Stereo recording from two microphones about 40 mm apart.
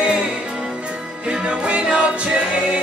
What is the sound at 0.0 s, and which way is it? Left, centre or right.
Music, right.